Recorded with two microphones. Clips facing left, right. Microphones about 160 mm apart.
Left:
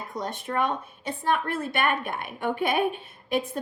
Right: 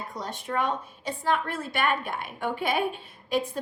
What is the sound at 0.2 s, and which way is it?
A woman's voice, 55° left (ahead or behind).